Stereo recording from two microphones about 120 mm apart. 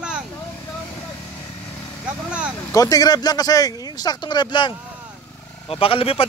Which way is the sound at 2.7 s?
30° left (ahead or behind).